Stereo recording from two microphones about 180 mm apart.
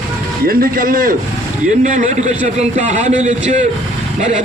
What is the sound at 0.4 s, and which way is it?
A man's voice, 55° right (ahead or behind).